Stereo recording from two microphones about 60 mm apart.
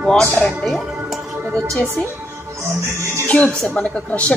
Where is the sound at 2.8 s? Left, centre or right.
Right.